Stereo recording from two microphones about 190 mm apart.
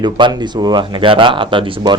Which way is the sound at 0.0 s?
25° right (ahead or behind).